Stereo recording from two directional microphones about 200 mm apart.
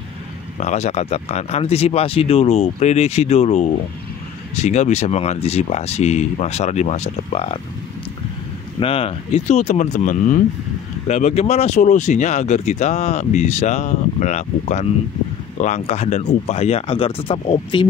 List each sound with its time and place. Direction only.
0.6 s speech: 35° left (ahead or behind)
8.7 s speech: 30° left (ahead or behind)